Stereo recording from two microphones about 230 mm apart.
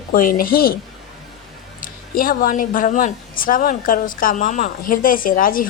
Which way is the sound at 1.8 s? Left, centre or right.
Left.